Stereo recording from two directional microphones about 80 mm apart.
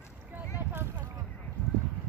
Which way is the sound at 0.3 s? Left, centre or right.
Right.